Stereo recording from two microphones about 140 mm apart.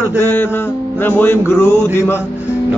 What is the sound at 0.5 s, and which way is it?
Music, 15° left (ahead or behind).